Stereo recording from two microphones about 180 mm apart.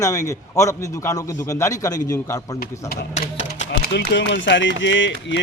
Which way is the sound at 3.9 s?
75° left (ahead or behind).